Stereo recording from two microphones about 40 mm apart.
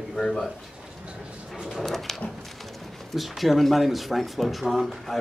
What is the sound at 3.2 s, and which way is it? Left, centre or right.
Speech, centre.